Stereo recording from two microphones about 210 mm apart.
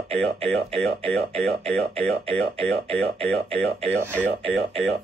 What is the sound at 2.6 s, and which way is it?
Speech, 5° left (ahead or behind).